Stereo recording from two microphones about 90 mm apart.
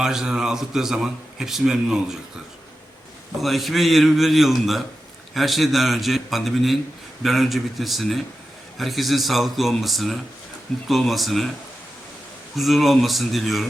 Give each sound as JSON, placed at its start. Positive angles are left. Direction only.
{"t": 0.0, "sound": "a man's voice", "side_deg": -5}
{"t": 3.4, "sound": "a man's voice", "side_deg": 0}
{"t": 12.5, "sound": "a man's voice", "side_deg": 0}